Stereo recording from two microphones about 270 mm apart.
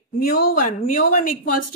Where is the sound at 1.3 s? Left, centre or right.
Left.